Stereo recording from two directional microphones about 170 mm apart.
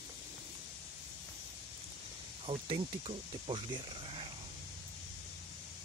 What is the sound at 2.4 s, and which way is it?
Speech, 35° right (ahead or behind).